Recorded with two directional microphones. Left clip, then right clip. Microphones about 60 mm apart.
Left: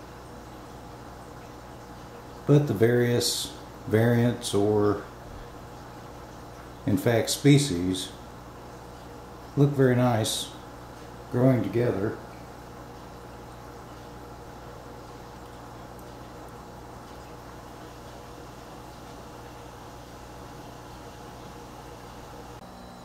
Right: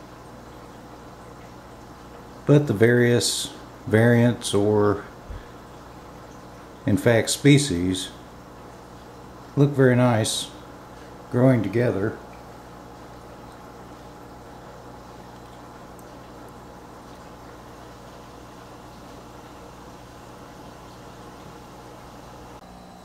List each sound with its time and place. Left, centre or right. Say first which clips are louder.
2.4 s speech: right 4 dB; right
6.8 s speech: right 5 dB; right
9.6 s speech: right 4 dB; right